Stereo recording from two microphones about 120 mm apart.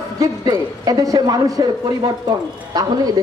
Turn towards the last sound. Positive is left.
turn(degrees=-35)  # may be behind; listen again after turning